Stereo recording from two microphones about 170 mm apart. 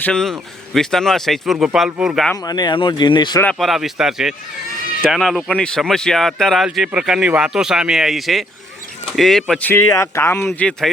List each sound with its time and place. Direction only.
0.0 s speech: 5° left (ahead or behind)
2.4 s speech: 25° left (ahead or behind)
3.4 s speech: centre (ahead or behind)